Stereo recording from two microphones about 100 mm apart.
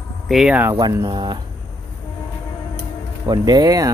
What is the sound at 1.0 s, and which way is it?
Speech, 45° right (ahead or behind).